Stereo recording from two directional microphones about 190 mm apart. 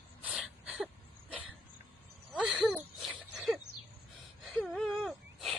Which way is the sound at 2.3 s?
5° right (ahead or behind).